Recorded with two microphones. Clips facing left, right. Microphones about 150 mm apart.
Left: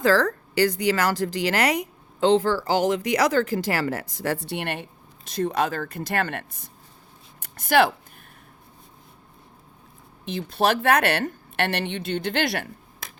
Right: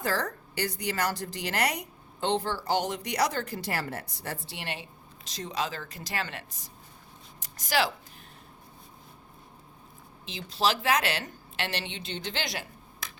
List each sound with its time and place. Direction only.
0.0 s a woman's voice: 90° left; by 7.9 s 55° left (ahead or behind)
10.2 s speech: 55° left (ahead or behind)